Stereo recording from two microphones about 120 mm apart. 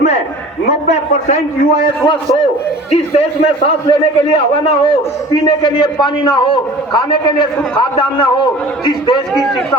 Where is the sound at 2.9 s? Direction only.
60° left (ahead or behind); by 8.5 s 40° left (ahead or behind).